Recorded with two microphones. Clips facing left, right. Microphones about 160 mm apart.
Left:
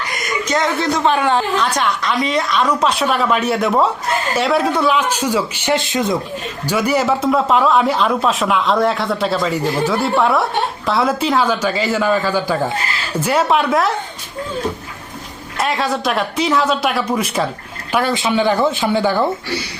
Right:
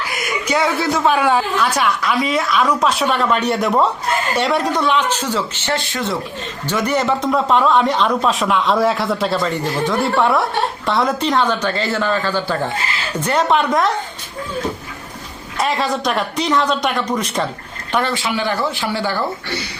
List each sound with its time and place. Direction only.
0.0 s a woman's voice: 5° right (ahead or behind)
15.5 s a woman's voice: centre (ahead or behind)
18.1 s speech: 20° left (ahead or behind)